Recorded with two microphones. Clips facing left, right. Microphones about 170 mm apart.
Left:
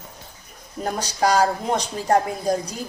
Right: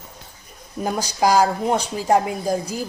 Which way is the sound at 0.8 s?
10° right (ahead or behind).